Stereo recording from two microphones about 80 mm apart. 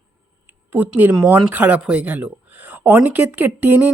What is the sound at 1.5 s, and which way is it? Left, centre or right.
Speech, centre.